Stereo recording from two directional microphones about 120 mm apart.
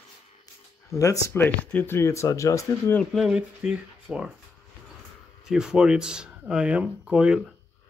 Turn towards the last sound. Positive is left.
turn(degrees=-5)  # may be behind; listen again after turning